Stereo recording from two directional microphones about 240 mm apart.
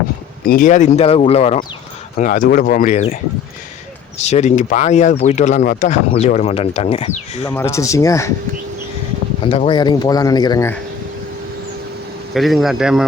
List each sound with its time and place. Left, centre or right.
0.4 s speech: left
4.2 s speech: left
7.4 s speech: centre
9.5 s speech: left
12.3 s a man's voice: centre